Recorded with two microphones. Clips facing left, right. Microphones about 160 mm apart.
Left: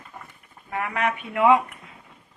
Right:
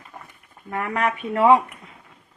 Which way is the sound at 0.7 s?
45° right (ahead or behind).